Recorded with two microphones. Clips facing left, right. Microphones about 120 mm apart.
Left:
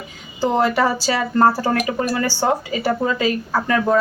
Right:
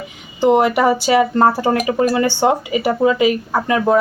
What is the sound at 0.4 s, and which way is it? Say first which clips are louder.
A woman's voice: right 4 dB; 20° right (ahead or behind).